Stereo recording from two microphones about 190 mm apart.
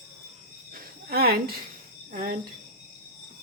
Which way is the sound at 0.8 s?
55° right (ahead or behind).